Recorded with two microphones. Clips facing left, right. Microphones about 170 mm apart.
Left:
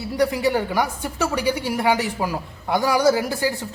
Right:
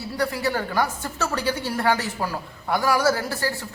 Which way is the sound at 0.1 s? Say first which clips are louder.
Left 5 dB; 15° left (ahead or behind).